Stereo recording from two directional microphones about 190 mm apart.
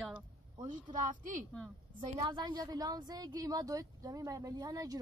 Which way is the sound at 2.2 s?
25° right (ahead or behind).